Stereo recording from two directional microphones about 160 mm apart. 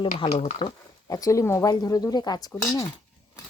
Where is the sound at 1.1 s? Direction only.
20° left (ahead or behind).